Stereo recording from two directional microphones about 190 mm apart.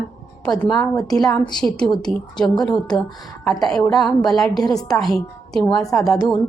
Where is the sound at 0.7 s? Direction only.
20° left (ahead or behind).